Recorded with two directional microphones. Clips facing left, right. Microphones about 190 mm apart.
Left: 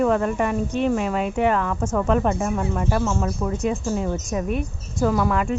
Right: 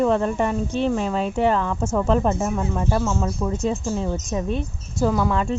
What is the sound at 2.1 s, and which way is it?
Speech, 25° right (ahead or behind).